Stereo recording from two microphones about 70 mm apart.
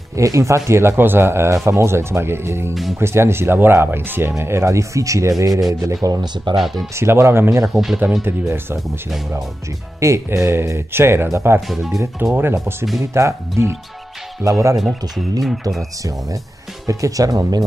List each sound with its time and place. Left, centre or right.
0.1 s speech: right
6.5 s speech: centre
7.0 s speech: right
7.7 s speech: centre
8.2 s speech: right
9.9 s speech: right
11.7 s speech: centre
12.2 s speech: right
13.0 s speech: right
14.8 s speech: centre
16.8 s speech: right